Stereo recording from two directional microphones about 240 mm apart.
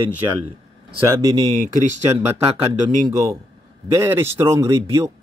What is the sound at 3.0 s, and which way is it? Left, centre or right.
Speech, centre.